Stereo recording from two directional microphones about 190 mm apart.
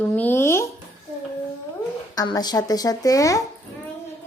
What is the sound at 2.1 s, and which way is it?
Speech, 20° left (ahead or behind).